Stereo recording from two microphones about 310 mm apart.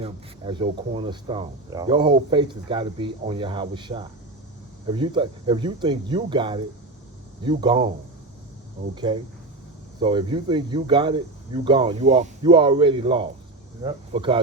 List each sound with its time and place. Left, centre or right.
0.0 s speech: centre
9.1 s speech: centre